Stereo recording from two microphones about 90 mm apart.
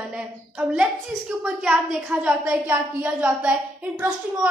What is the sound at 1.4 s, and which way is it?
A woman's voice, 10° right (ahead or behind).